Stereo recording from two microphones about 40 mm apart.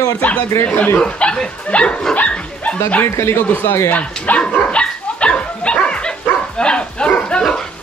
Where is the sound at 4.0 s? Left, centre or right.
Left.